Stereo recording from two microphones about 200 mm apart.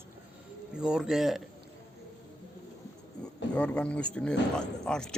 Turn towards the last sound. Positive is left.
turn(degrees=5)  # may be behind; listen again after turning